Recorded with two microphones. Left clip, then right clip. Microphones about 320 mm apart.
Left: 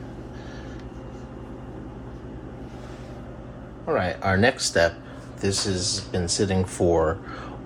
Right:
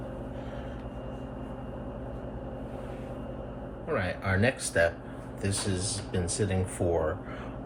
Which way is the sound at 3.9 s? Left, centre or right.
Centre.